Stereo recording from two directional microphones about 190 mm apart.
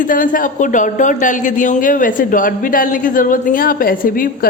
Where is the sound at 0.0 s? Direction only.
45° left (ahead or behind).